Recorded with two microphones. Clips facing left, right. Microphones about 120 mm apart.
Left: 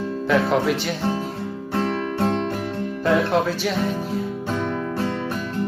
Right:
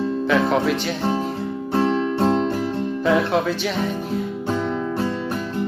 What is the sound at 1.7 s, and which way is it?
Music, 25° right (ahead or behind).